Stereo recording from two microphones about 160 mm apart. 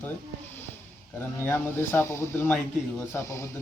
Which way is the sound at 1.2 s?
15° left (ahead or behind).